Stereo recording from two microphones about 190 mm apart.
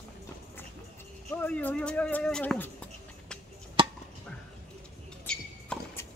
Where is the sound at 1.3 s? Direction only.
10° left (ahead or behind).